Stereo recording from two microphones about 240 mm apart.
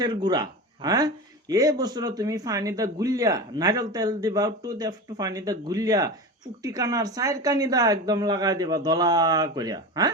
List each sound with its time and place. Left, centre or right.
0.0 s speech: centre